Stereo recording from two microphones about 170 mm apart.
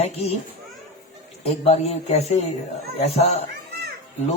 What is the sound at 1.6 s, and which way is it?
A man's voice, 40° left (ahead or behind).